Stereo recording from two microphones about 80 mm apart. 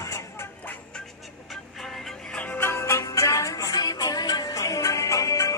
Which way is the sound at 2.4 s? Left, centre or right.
Left.